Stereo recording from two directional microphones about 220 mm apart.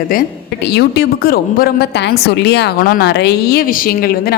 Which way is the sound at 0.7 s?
50° left (ahead or behind).